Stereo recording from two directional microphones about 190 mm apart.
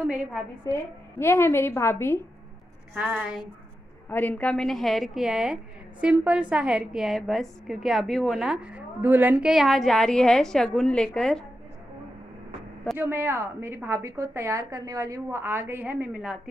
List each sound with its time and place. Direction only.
0.1 s a woman's voice: 5° right (ahead or behind)
0.7 s a woman's voice: 15° left (ahead or behind)
2.9 s a woman's voice: 5° right (ahead or behind)
4.1 s a woman's voice: 10° left (ahead or behind)
12.9 s a woman's voice: 10° right (ahead or behind)